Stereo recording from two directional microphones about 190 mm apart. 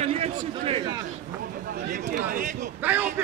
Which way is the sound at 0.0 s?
35° right (ahead or behind).